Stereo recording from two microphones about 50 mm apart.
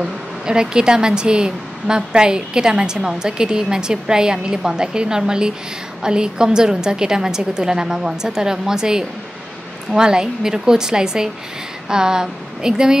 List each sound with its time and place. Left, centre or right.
0.0 s speech: centre